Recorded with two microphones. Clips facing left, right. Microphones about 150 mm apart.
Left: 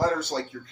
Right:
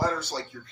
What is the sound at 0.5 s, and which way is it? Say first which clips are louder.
Speech: left 4 dB; 50° left (ahead or behind).